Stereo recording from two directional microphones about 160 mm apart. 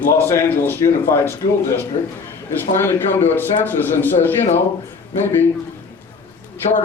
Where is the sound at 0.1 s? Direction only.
15° left (ahead or behind).